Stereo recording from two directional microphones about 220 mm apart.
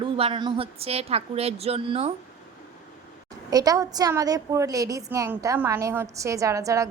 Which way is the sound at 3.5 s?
15° right (ahead or behind).